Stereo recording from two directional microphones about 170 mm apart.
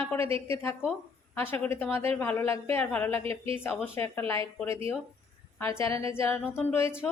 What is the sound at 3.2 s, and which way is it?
Speech, 35° right (ahead or behind).